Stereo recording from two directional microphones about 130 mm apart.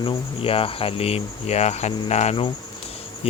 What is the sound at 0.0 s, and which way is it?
Speech, 45° left (ahead or behind).